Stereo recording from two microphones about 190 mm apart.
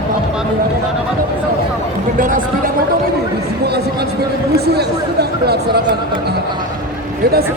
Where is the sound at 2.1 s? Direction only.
45° right (ahead or behind).